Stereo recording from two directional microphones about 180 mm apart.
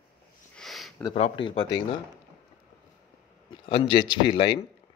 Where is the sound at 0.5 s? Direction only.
Centre (ahead or behind).